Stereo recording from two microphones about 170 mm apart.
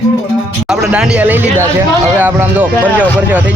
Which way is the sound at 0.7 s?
5° right (ahead or behind).